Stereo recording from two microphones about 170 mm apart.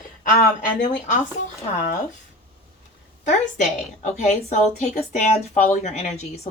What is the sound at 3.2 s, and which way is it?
A woman's voice, 45° left (ahead or behind).